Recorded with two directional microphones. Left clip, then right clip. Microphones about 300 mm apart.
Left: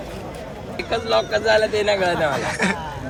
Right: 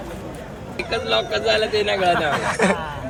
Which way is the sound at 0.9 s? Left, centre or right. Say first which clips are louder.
Left 1 dB; centre.